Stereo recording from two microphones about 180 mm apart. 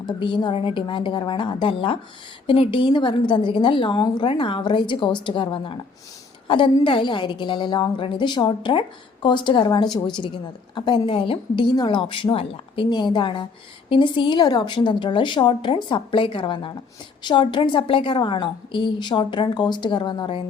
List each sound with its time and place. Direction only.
0.2 s a woman's voice: 25° left (ahead or behind)